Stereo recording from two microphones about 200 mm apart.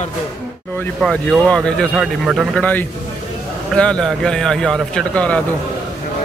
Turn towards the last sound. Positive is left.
turn(degrees=5)  # may be behind; listen again after turning